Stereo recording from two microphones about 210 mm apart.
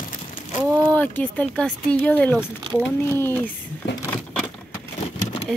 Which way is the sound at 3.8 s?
55° left (ahead or behind).